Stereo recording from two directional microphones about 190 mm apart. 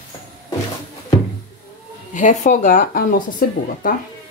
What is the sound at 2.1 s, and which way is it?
Speech, 40° left (ahead or behind).